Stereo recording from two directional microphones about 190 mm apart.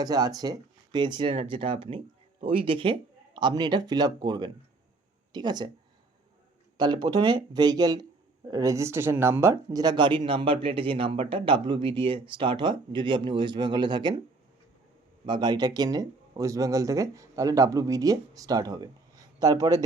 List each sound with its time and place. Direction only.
0.0 s speech: 20° right (ahead or behind)
6.7 s speech: 25° right (ahead or behind)
15.3 s speech: 20° right (ahead or behind)